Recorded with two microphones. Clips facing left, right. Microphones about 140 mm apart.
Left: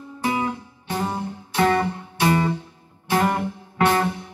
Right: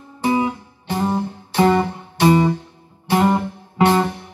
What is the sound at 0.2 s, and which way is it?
Music, 25° right (ahead or behind).